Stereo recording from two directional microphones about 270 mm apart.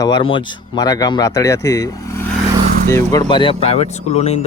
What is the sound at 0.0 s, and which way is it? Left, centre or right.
Speech, centre.